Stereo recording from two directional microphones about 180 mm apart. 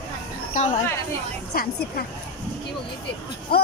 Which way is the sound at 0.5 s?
40° left (ahead or behind).